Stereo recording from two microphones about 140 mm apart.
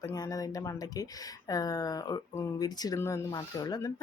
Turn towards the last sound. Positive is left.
turn(degrees=25)  # may be behind; listen again after turning